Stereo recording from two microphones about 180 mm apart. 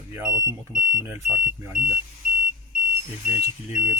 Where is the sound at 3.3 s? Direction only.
10° right (ahead or behind).